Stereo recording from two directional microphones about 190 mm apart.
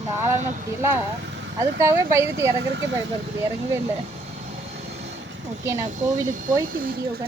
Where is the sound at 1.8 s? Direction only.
15° right (ahead or behind).